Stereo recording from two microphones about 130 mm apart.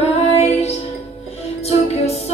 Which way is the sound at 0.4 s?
60° left (ahead or behind).